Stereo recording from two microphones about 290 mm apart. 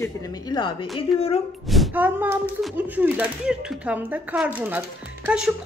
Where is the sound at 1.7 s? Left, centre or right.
Centre.